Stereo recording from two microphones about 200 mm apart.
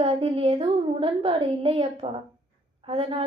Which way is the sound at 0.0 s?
30° right (ahead or behind).